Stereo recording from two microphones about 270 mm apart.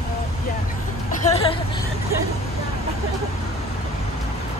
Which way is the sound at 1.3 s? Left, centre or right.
Centre.